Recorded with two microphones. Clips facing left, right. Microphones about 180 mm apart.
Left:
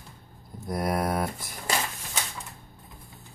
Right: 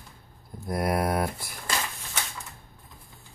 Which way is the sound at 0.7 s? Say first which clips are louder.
Right 1 dB; 10° right (ahead or behind).